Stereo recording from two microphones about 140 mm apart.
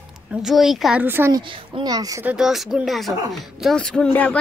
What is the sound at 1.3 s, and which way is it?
Speech, 35° right (ahead or behind).